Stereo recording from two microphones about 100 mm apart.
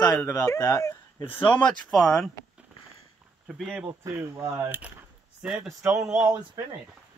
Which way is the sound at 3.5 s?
10° right (ahead or behind).